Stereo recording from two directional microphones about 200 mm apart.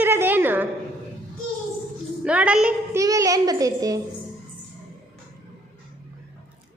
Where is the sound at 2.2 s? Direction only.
5° right (ahead or behind).